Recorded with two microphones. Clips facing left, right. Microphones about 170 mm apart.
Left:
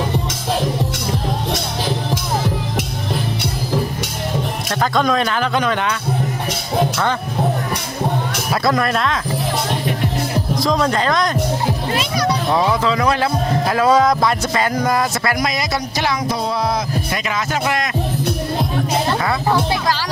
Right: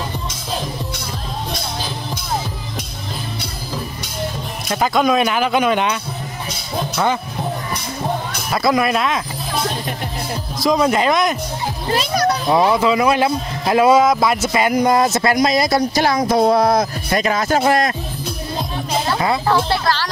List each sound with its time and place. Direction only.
4.6 s a man's voice: 5° right (ahead or behind)
8.6 s a man's voice: 5° right (ahead or behind)
10.6 s a man's voice: 5° right (ahead or behind)
11.9 s speech: 40° right (ahead or behind)
12.4 s a man's voice: 15° right (ahead or behind)
13.9 s speech: 5° right (ahead or behind); by 17.8 s 40° right (ahead or behind)
19.4 s speech: 15° left (ahead or behind)